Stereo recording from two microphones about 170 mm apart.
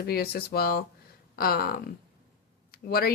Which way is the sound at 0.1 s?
65° left (ahead or behind).